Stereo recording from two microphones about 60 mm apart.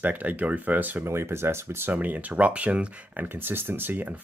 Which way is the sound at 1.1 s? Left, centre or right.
Right.